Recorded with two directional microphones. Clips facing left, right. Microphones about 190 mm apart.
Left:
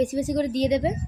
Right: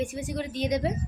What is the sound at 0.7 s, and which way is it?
Speech, 25° left (ahead or behind).